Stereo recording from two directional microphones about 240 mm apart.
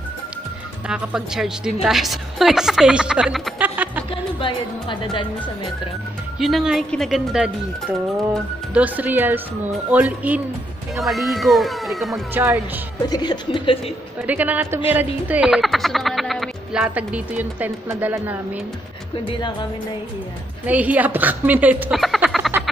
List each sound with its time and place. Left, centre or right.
0.8 s speech: centre
4.1 s speech: left
6.4 s speech: centre
13.1 s speech: centre
14.2 s speech: centre
20.6 s speech: centre